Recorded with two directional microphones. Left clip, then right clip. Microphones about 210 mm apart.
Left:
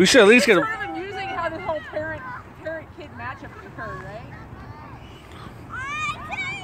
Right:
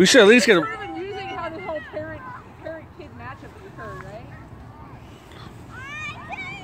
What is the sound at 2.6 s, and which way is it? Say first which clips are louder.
Vehicle: left 3 dB; 50° left (ahead or behind).